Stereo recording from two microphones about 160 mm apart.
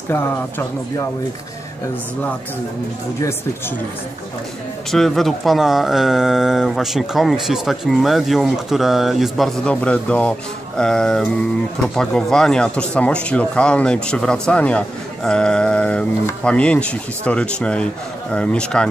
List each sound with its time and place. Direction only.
0.1 s speech: 15° left (ahead or behind)
4.9 s speech: centre (ahead or behind)